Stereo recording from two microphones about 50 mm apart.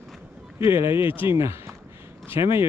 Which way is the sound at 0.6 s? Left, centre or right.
Right.